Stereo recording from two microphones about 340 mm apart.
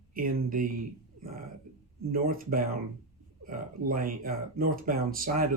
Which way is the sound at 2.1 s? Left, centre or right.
Right.